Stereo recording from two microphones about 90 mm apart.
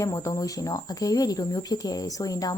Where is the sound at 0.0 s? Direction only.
35° left (ahead or behind).